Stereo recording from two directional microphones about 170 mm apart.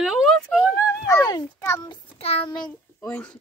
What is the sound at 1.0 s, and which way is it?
A child's voice, 20° left (ahead or behind).